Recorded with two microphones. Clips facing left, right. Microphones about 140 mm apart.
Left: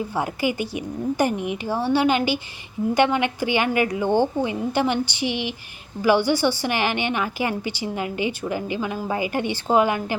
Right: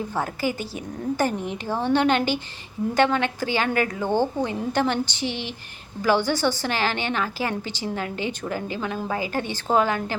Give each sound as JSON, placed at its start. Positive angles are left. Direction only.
{"t": 0.2, "sound": "a woman's voice", "side_deg": 15}